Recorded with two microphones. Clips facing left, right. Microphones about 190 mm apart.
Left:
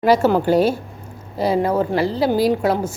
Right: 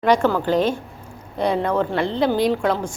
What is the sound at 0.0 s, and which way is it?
A woman's voice, 5° left (ahead or behind).